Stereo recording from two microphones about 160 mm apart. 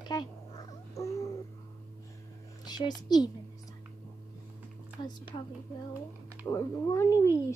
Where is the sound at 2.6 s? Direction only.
25° left (ahead or behind).